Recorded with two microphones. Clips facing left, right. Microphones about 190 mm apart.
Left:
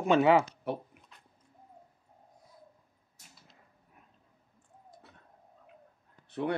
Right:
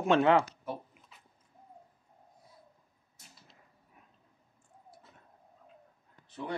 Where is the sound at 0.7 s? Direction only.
65° left (ahead or behind).